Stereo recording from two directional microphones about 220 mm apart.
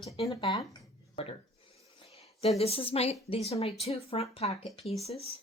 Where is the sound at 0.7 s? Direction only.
25° left (ahead or behind).